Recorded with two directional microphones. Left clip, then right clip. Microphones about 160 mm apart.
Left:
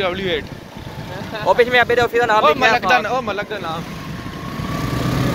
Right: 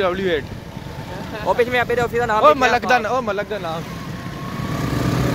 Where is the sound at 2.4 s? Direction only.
60° right (ahead or behind).